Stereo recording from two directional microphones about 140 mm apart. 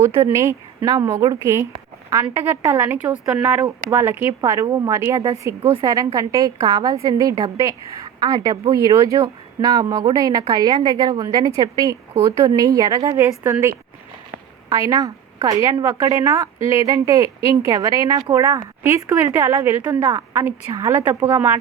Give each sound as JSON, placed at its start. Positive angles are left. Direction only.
{"t": 0.0, "sound": "a woman's voice", "side_deg": -20}